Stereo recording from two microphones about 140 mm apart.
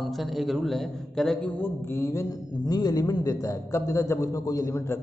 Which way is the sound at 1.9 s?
20° left (ahead or behind).